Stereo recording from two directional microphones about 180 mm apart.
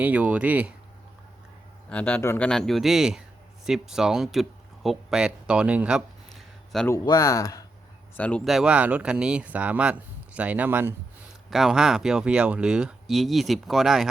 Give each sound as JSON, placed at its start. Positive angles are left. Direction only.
{"t": 0.0, "sound": "speech", "side_deg": -10}
{"t": 1.9, "sound": "speech", "side_deg": 10}
{"t": 6.7, "sound": "a man's voice", "side_deg": 10}
{"t": 8.1, "sound": "speech", "side_deg": 5}